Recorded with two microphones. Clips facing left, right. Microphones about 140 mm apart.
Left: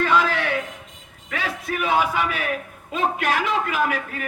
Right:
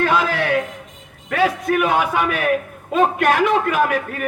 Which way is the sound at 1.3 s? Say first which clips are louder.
Right 10 dB; 55° right (ahead or behind).